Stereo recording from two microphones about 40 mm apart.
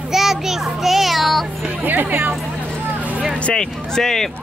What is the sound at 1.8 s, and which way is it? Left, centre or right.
Speech, right.